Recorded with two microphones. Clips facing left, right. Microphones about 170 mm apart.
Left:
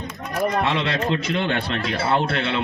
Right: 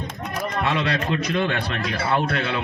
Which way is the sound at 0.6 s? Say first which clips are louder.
Left 1 dB; 25° left (ahead or behind).